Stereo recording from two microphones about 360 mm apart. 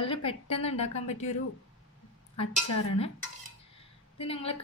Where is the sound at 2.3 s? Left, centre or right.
Centre.